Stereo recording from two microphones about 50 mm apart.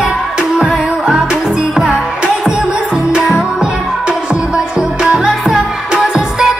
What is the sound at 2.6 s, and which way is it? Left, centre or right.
Music, right.